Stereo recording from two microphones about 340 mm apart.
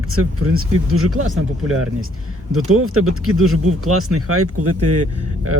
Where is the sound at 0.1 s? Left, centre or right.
Right.